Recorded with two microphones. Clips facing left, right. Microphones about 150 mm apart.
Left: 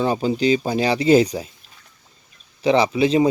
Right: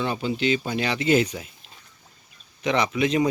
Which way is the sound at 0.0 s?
35° left (ahead or behind).